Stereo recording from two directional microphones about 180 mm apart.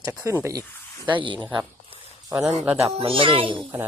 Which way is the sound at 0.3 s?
15° right (ahead or behind).